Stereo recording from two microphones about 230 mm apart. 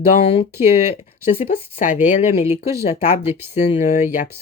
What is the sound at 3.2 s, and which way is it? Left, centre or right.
Speech, centre.